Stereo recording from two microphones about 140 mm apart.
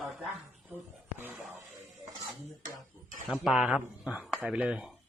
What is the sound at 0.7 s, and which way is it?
Speech, 15° right (ahead or behind).